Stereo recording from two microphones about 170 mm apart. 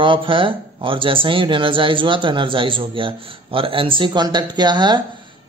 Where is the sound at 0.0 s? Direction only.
30° right (ahead or behind).